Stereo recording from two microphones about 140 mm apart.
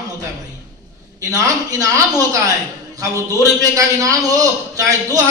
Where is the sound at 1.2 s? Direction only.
25° right (ahead or behind).